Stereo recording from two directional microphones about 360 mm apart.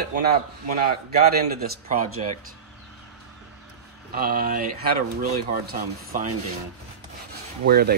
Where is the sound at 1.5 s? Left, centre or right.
Right.